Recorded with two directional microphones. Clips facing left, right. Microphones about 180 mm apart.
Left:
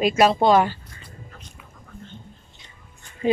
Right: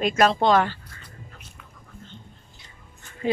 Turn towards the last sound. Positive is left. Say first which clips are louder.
# left 4 dB
turn(degrees=20)  # may be behind; listen again after turning